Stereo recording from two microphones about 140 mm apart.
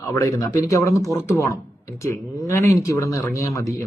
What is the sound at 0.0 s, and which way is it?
Speech, 25° left (ahead or behind).